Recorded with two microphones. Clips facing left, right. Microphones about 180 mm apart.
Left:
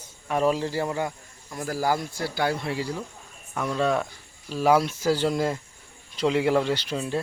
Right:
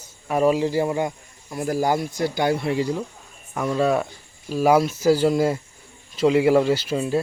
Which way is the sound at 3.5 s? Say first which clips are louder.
Right 4 dB; 5° right (ahead or behind).